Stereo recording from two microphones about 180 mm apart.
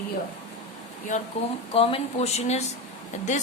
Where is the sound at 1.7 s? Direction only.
30° left (ahead or behind).